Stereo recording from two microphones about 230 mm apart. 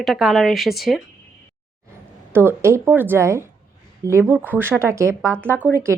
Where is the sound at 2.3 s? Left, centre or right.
Centre.